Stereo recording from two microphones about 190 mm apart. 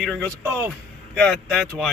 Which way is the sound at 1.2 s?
Centre (ahead or behind).